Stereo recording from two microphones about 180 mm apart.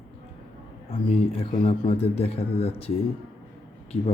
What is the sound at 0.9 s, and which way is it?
Speech, 30° left (ahead or behind).